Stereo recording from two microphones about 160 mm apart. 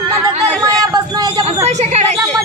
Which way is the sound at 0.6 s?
25° right (ahead or behind).